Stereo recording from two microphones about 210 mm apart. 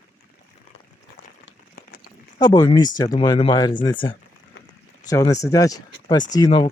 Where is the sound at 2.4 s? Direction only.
20° left (ahead or behind).